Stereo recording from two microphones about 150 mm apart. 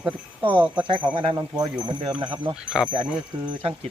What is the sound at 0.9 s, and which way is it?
Speech, 30° right (ahead or behind).